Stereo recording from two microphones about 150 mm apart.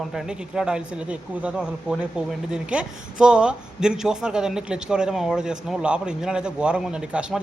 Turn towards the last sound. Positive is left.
turn(degrees=-5)  # may be behind; listen again after turning